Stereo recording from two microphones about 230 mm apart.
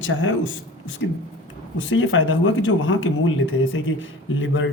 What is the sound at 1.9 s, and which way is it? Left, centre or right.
A man's voice, left.